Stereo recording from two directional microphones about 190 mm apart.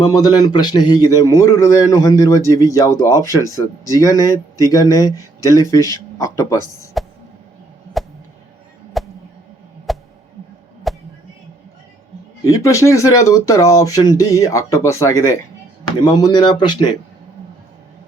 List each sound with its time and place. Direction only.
0.0 s speech: 20° left (ahead or behind)
7.0 s a sound: centre (ahead or behind)
12.5 s speech: 15° left (ahead or behind)